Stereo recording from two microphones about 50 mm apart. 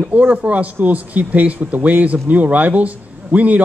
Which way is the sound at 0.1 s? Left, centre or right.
Right.